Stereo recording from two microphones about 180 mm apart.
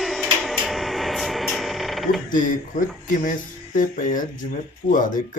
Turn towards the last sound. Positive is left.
turn(degrees=45)  # may be behind; listen again after turning